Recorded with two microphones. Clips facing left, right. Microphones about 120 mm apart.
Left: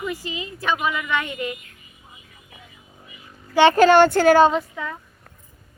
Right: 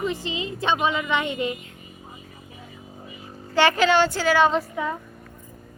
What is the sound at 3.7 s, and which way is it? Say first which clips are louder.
Speech: left 6 dB; 50° left (ahead or behind).